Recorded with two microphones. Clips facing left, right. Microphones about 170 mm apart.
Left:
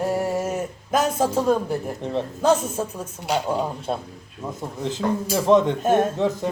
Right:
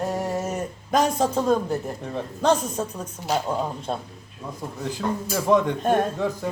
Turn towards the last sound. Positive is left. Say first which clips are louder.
# left 4 dB
turn(degrees=20)  # may be behind; listen again after turning